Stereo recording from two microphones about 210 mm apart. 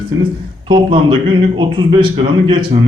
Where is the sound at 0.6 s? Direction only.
25° right (ahead or behind).